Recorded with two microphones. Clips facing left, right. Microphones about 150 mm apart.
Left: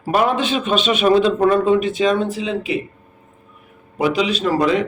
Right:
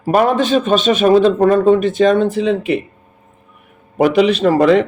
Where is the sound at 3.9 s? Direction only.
55° right (ahead or behind).